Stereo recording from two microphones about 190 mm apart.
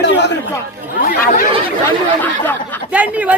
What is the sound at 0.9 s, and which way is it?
Speech, 45° left (ahead or behind).